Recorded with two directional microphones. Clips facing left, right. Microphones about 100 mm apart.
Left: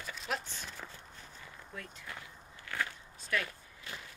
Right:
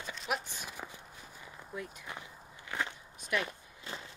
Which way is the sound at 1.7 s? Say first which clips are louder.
Right 4 dB; 15° right (ahead or behind).